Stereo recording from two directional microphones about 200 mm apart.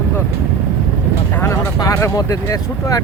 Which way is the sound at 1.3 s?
10° left (ahead or behind).